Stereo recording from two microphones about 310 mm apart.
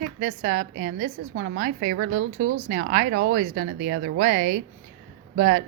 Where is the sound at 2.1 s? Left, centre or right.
Right.